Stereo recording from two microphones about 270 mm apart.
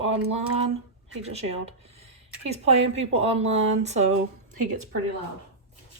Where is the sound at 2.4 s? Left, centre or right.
Right.